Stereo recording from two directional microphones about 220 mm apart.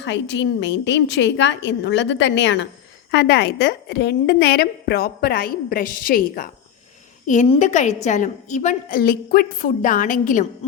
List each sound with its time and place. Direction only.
0.0 s a woman's voice: 55° left (ahead or behind)
7.3 s a woman's voice: 30° left (ahead or behind)
10.6 s a woman's voice: 25° left (ahead or behind)